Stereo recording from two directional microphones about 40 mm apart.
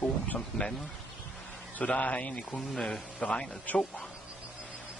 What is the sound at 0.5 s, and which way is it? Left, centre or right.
Speech, centre.